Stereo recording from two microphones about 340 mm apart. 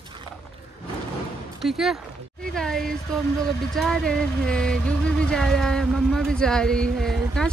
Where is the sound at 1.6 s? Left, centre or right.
Centre.